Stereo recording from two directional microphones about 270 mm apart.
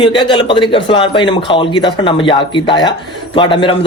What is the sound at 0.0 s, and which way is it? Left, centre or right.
Speech, centre.